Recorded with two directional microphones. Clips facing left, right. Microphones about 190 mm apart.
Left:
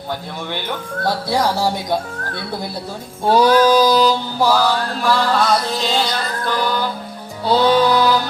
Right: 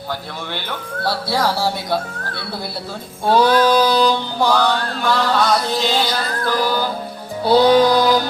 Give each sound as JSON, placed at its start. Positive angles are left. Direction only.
{"t": 1.0, "sound": "mantra", "side_deg": 20}
{"t": 3.2, "sound": "mantra", "side_deg": 10}
{"t": 7.4, "sound": "music", "side_deg": -15}